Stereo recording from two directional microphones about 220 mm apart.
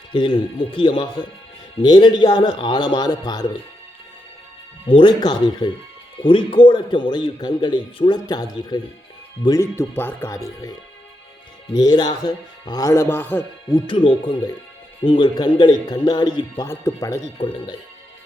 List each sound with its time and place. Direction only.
0.1 s a man's voice: 20° left (ahead or behind)
4.9 s a man's voice: 20° left (ahead or behind)